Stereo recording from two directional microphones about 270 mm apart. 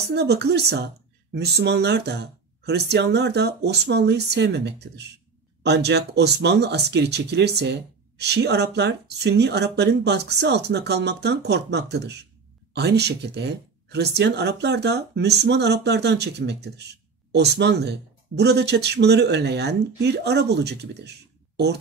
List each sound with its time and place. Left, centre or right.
0.1 s speech: right